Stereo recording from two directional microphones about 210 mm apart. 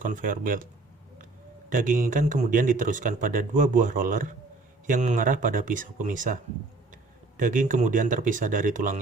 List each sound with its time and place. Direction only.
0.0 s speech: 40° right (ahead or behind)
1.7 s speech: 40° right (ahead or behind)